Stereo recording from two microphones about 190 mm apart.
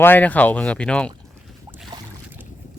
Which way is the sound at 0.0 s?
10° left (ahead or behind).